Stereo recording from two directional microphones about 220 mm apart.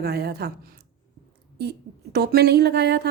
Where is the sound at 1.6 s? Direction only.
50° right (ahead or behind).